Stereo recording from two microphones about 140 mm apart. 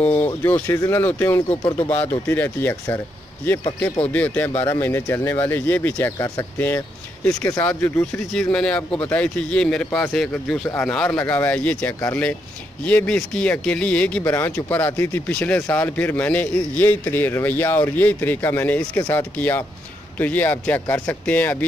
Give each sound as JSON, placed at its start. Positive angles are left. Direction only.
{"t": 0.0, "sound": "speech", "side_deg": 25}
{"t": 1.6, "sound": "speech", "side_deg": 40}
{"t": 1.9, "sound": "speech", "side_deg": 10}
{"t": 4.1, "sound": "speech", "side_deg": 10}
{"t": 7.4, "sound": "speech", "side_deg": 15}
{"t": 8.3, "sound": "speech", "side_deg": 5}